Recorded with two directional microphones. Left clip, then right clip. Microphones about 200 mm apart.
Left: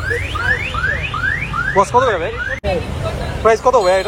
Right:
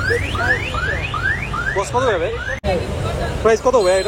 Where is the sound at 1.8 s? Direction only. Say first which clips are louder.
Left 5 dB; 10° right (ahead or behind).